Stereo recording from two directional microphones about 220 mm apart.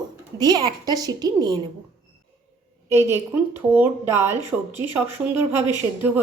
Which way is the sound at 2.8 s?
10° right (ahead or behind).